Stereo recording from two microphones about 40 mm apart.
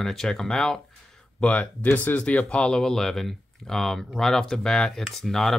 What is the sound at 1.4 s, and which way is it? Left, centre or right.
Speech, left.